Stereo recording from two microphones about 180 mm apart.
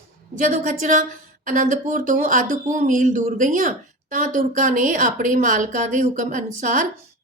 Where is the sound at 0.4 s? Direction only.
40° right (ahead or behind).